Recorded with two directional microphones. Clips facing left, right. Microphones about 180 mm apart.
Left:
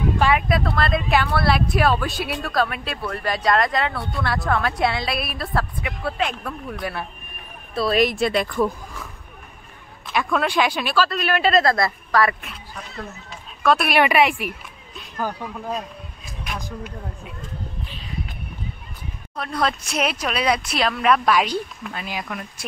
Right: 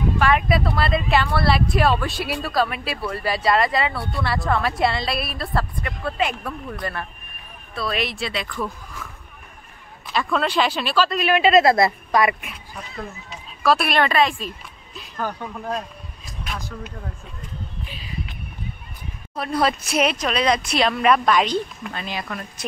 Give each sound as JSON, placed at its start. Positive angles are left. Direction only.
{"t": 0.3, "sound": "speech", "side_deg": 0}
{"t": 7.7, "sound": "speech", "side_deg": 40}
{"t": 10.1, "sound": "speech", "side_deg": 10}
{"t": 11.6, "sound": "speech", "side_deg": -20}
{"t": 13.9, "sound": "speech", "side_deg": 15}
{"t": 16.5, "sound": "speech", "side_deg": 15}
{"t": 17.8, "sound": "a sound", "side_deg": -10}
{"t": 19.3, "sound": "speech", "side_deg": -5}